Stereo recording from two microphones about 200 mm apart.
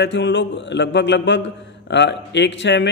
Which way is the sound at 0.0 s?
60° left (ahead or behind).